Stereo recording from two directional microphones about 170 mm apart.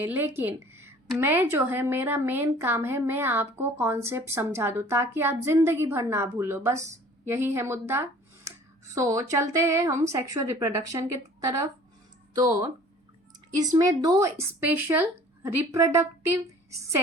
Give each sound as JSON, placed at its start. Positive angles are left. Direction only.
{"t": 0.0, "sound": "a woman's voice", "side_deg": -15}